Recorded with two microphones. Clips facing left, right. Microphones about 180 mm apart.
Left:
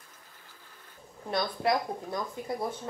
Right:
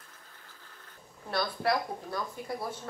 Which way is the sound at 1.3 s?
20° left (ahead or behind).